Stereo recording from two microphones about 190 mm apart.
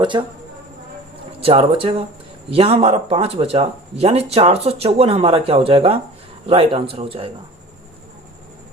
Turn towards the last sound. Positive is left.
turn(degrees=-30)  # may be behind; listen again after turning